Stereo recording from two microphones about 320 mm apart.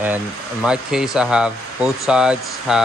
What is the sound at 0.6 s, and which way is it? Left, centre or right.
Speech, centre.